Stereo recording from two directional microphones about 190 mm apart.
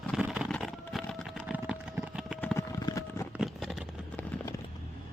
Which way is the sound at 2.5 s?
20° left (ahead or behind).